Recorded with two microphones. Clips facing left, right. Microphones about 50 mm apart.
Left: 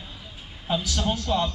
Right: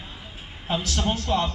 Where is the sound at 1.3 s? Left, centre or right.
Right.